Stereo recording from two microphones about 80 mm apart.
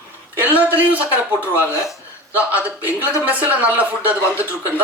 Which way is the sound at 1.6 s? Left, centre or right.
Left.